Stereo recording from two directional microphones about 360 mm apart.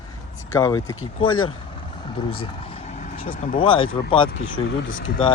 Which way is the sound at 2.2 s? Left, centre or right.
Centre.